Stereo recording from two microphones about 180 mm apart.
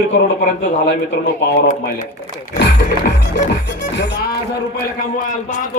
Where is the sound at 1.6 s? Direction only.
45° left (ahead or behind).